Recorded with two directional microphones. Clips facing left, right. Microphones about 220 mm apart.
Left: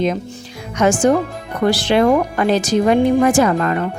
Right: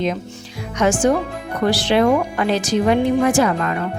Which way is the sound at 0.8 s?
45° left (ahead or behind).